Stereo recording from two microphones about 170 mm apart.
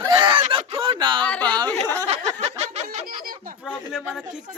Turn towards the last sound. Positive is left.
turn(degrees=0)  # may be behind; listen again after turning